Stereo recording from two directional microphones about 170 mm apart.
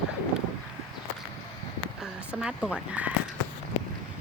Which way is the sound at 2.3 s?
5° right (ahead or behind).